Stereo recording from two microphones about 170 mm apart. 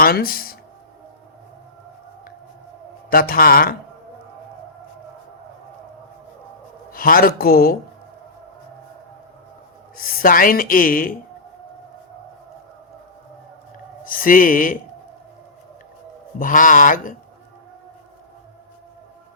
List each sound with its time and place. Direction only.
0.0 s speech: 60° left (ahead or behind)
3.1 s a woman's voice: 60° left (ahead or behind)
6.9 s a woman's voice: 55° left (ahead or behind)
10.0 s a woman's voice: 55° left (ahead or behind)
14.0 s a woman's voice: 55° left (ahead or behind)
16.4 s speech: 50° left (ahead or behind)